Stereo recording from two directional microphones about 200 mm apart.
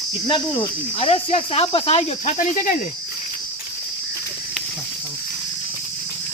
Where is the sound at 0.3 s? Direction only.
20° left (ahead or behind).